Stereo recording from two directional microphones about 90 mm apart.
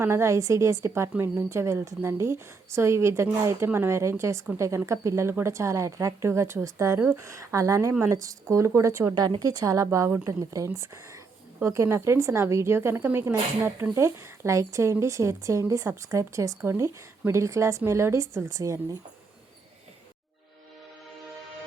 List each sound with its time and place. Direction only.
0.0 s a woman's voice: 30° right (ahead or behind)